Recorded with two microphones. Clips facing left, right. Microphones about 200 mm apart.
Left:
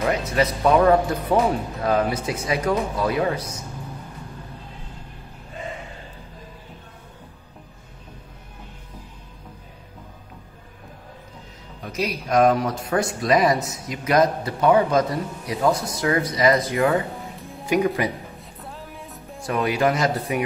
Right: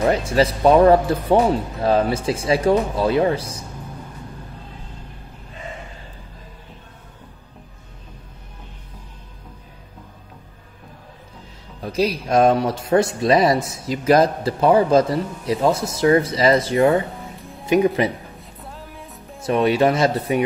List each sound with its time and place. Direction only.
0.0 s speech: 30° right (ahead or behind)
11.8 s speech: 30° right (ahead or behind)
17.2 s music: centre (ahead or behind)
17.6 s speech: 25° right (ahead or behind)
18.4 s music: centre (ahead or behind)
19.4 s speech: 25° right (ahead or behind)